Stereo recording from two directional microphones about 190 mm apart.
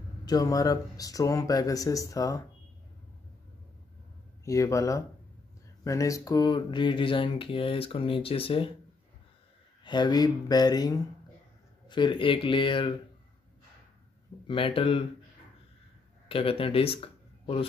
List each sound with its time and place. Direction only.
0.2 s speech: 20° left (ahead or behind)
4.5 s speech: 15° left (ahead or behind)
9.8 s speech: 20° left (ahead or behind)
14.5 s speech: 30° left (ahead or behind)
16.3 s speech: 30° left (ahead or behind)